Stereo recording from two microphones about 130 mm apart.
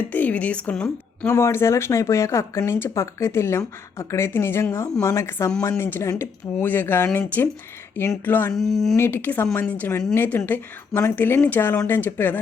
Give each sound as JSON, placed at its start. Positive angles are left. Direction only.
{"t": 0.1, "sound": "speech", "side_deg": 10}
{"t": 1.3, "sound": "speech", "side_deg": 20}
{"t": 8.5, "sound": "speech", "side_deg": 0}
{"t": 9.0, "sound": "speech", "side_deg": 15}